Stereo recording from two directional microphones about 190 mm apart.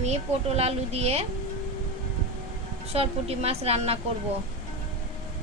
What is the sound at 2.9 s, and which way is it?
A woman's voice, 30° right (ahead or behind).